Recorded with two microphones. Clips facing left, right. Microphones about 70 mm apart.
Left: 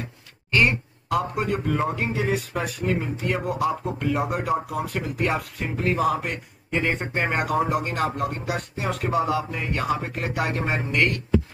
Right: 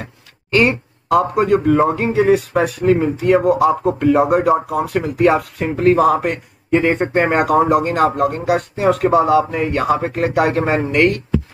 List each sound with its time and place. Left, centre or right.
0.6 s a sound: right
1.2 s speech: right
10.6 s speech: right